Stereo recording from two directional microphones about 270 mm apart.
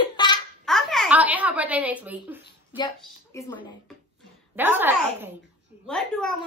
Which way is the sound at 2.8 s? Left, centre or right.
Centre.